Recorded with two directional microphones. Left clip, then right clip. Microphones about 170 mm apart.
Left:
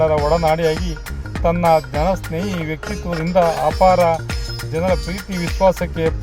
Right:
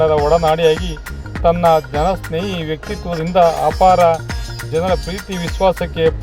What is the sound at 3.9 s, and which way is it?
Speech, 20° right (ahead or behind).